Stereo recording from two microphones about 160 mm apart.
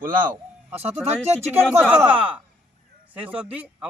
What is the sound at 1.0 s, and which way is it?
Speech, 40° right (ahead or behind).